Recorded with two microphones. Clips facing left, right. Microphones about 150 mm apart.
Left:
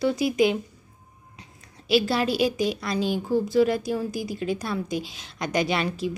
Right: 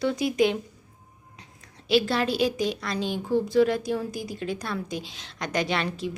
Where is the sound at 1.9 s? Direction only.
10° left (ahead or behind).